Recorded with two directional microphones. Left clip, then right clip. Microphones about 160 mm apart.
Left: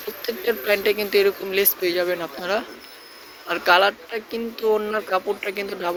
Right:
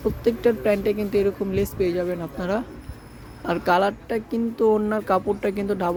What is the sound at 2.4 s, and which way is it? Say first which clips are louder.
Speech: left 2 dB; 20° right (ahead or behind).